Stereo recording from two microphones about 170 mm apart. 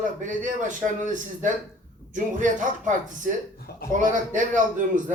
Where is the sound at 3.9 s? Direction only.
50° right (ahead or behind).